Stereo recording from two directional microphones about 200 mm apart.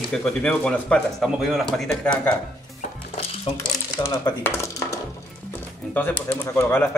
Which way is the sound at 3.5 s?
30° left (ahead or behind).